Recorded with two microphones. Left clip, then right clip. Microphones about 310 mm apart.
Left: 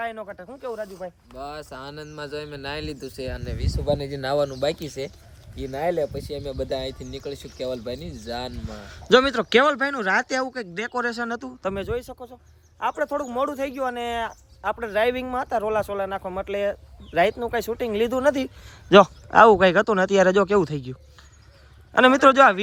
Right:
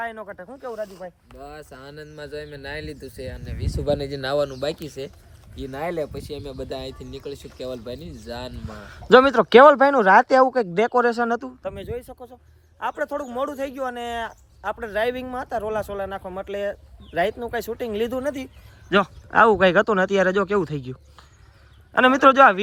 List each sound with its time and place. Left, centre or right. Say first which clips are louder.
0.0 s speech: even; centre
1.5 s speech: left 4 dB; centre
3.8 s speech: right 1 dB; centre
4.1 s speech: even; centre
5.8 s speech: left 3 dB; centre
6.2 s speech: left 3 dB; centre
12.8 s speech: left 2 dB; centre